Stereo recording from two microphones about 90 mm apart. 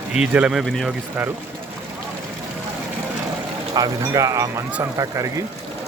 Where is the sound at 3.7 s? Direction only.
45° right (ahead or behind).